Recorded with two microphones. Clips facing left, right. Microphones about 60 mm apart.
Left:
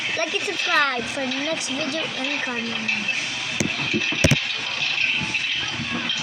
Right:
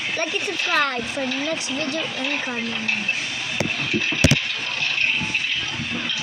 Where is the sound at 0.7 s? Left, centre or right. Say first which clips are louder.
Left 1 dB; left.